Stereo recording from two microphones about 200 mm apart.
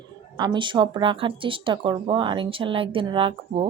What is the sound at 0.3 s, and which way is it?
Speech, 20° right (ahead or behind).